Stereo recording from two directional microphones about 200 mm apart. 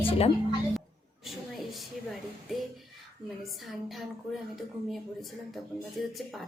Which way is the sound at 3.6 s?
Centre (ahead or behind).